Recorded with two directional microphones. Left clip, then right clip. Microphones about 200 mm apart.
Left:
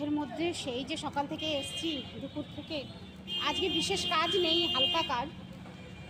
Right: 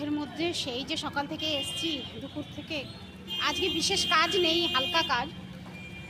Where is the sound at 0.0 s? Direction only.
5° left (ahead or behind).